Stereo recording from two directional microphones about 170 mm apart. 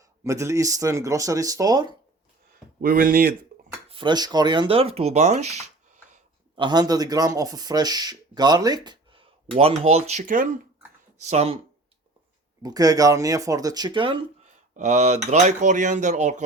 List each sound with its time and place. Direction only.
0.3 s speech: 15° right (ahead or behind)
2.5 s speech: 60° right (ahead or behind)
3.8 s speech: 30° right (ahead or behind)
6.6 s speech: 25° right (ahead or behind); by 10.5 s 50° right (ahead or behind)
11.2 s speech: 40° right (ahead or behind)
12.6 s speech: 20° right (ahead or behind)
14.4 s speech: 45° right (ahead or behind)